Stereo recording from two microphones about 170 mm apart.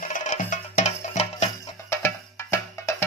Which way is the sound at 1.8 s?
15° left (ahead or behind).